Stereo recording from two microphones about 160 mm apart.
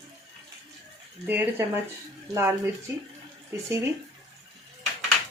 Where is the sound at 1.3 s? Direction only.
15° right (ahead or behind).